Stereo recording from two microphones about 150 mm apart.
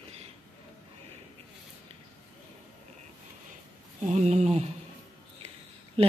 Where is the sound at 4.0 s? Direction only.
50° right (ahead or behind).